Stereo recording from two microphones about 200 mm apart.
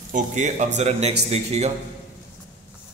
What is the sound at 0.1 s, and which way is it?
A man's voice, 35° right (ahead or behind).